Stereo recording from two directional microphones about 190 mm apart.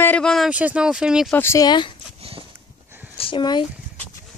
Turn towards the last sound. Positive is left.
turn(degrees=25)  # may be behind; listen again after turning